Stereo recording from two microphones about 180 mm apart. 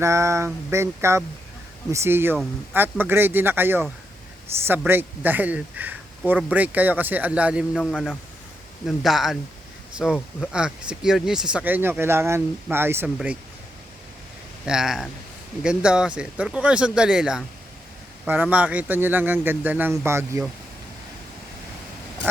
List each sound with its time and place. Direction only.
0.0 s speech: 15° right (ahead or behind)
4.9 s speech: 10° right (ahead or behind)
7.8 s speech: 5° left (ahead or behind); by 13.3 s 10° right (ahead or behind)
14.6 s speech: centre (ahead or behind)